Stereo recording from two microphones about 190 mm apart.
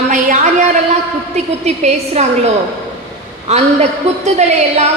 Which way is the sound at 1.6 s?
35° right (ahead or behind).